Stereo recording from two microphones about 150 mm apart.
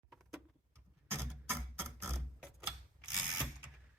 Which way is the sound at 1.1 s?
15° right (ahead or behind).